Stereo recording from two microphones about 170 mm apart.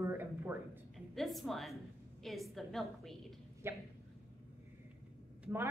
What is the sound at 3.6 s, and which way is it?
Speech, 15° right (ahead or behind).